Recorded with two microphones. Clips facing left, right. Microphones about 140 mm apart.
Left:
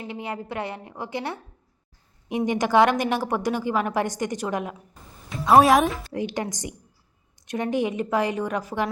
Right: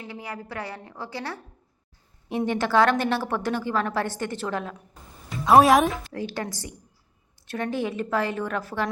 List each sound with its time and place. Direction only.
0.0 s a woman's voice: 20° left (ahead or behind)
5.5 s speech: centre (ahead or behind)
6.1 s a woman's voice: 15° left (ahead or behind)